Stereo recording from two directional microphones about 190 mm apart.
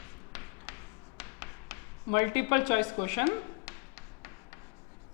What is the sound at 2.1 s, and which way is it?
A woman's voice, 15° left (ahead or behind).